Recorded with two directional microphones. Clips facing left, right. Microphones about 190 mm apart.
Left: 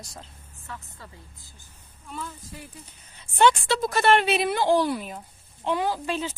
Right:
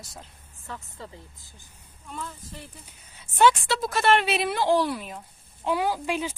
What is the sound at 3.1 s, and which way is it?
A woman's voice, 5° right (ahead or behind).